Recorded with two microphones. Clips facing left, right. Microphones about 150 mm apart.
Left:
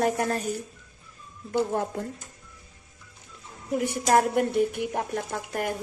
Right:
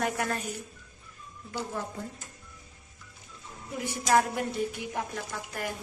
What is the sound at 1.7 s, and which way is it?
Speech, 60° left (ahead or behind).